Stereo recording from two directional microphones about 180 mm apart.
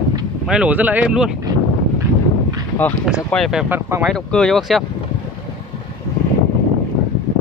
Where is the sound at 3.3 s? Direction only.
Centre (ahead or behind).